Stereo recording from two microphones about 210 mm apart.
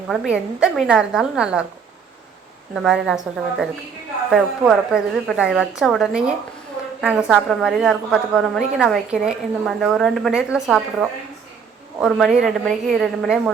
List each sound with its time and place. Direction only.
0.1 s a woman's voice: centre (ahead or behind)
2.7 s a woman's voice: centre (ahead or behind)
4.3 s a woman's voice: centre (ahead or behind)
11.9 s a woman's voice: centre (ahead or behind)